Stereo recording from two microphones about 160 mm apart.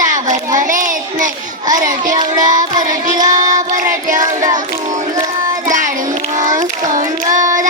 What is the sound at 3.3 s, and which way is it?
Child singing, 55° right (ahead or behind).